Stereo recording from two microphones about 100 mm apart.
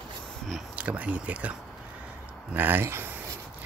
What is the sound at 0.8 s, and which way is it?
Speech, 15° right (ahead or behind).